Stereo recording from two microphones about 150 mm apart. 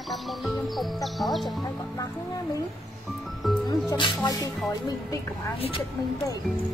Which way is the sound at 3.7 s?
30° left (ahead or behind).